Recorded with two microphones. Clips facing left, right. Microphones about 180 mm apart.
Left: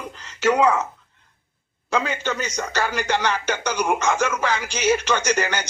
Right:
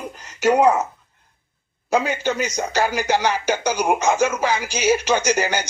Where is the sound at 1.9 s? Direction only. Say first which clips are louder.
Right 4 dB; 10° right (ahead or behind).